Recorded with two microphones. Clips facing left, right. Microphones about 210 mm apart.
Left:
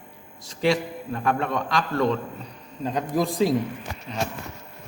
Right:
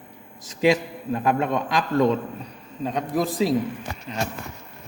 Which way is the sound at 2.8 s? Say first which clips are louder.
Even; centre (ahead or behind).